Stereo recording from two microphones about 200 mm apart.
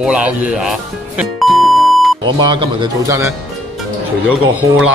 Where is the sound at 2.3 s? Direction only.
25° right (ahead or behind); by 4.9 s 5° right (ahead or behind).